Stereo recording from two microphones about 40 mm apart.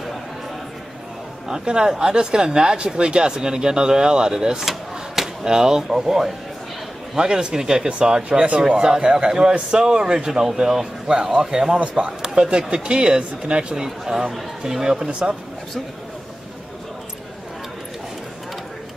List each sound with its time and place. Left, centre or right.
1.5 s speech: centre
4.6 s a sound: centre
5.4 s speech: centre
7.2 s speech: right
8.2 s speech: right
13.8 s speech: centre
15.0 s speech: right